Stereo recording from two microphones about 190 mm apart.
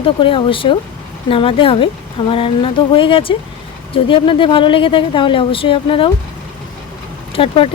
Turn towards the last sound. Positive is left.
turn(degrees=30)  # may be behind; listen again after turning